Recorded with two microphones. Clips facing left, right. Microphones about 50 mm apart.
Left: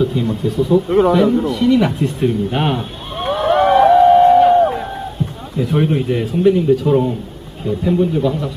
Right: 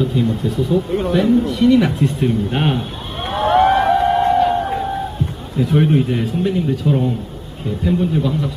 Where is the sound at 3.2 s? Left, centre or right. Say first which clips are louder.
Even; centre.